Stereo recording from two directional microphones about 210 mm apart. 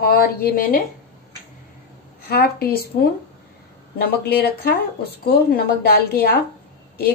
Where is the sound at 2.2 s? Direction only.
50° left (ahead or behind).